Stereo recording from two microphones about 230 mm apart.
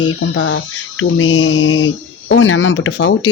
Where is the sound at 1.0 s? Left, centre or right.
Left.